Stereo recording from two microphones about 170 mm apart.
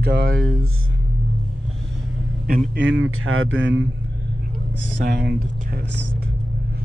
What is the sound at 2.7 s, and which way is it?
Speech, 90° right.